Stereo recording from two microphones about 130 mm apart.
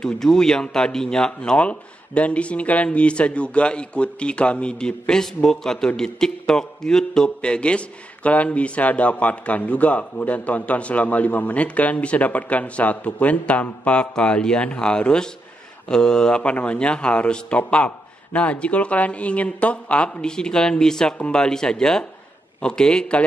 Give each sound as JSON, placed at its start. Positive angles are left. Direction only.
{"t": 0.0, "sound": "speech", "side_deg": 5}